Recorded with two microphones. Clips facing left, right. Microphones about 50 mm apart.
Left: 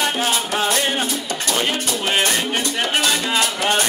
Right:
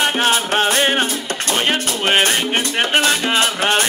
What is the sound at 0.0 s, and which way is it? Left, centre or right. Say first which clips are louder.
Music: right 4 dB; right.